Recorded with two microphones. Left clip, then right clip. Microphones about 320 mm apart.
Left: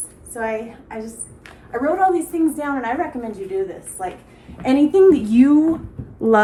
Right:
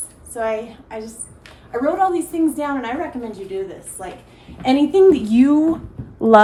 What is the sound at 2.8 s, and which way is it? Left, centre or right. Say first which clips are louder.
A woman's voice: left 2 dB; centre.